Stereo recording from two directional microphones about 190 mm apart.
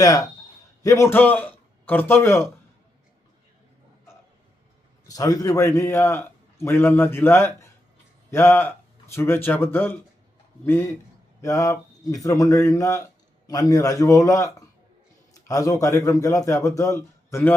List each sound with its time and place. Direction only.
0.0 s a man's voice: 20° left (ahead or behind)
5.0 s a man's voice: 20° left (ahead or behind)
11.3 s a man's voice: 15° left (ahead or behind)